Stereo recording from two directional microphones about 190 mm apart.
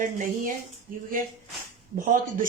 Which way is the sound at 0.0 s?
45° right (ahead or behind).